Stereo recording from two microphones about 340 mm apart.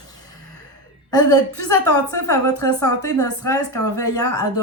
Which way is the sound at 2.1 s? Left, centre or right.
Centre.